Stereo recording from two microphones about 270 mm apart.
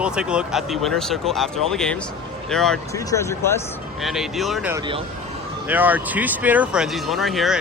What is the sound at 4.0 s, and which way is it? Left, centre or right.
Speech, centre.